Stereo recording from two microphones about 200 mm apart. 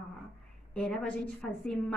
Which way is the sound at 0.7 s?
5° left (ahead or behind).